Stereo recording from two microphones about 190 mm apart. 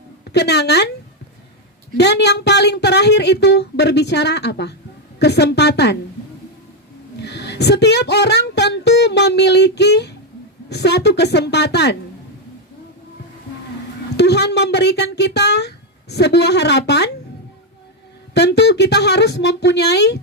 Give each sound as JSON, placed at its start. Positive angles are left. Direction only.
{"t": 0.3, "sound": "speech", "side_deg": 60}
{"t": 2.0, "sound": "speech", "side_deg": 65}
{"t": 7.2, "sound": "speech", "side_deg": 65}
{"t": 14.2, "sound": "speech", "side_deg": 60}
{"t": 18.3, "sound": "speech", "side_deg": 60}